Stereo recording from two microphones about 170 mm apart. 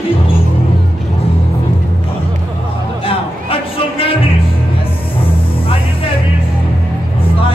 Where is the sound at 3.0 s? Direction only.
30° left (ahead or behind).